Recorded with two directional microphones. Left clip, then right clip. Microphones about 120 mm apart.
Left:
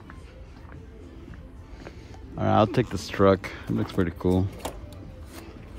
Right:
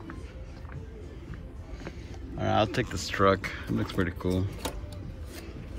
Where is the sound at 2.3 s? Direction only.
75° left (ahead or behind).